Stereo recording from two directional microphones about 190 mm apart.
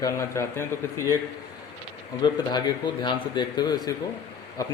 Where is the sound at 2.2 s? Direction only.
25° left (ahead or behind).